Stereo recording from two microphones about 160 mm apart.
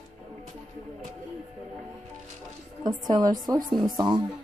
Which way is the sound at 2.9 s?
25° right (ahead or behind).